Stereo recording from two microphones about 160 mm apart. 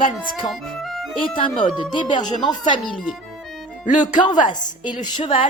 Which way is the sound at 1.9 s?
30° left (ahead or behind).